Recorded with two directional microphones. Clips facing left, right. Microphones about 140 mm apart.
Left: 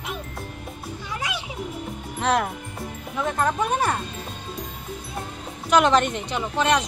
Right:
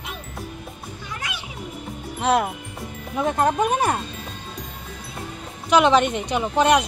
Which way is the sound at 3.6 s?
15° right (ahead or behind).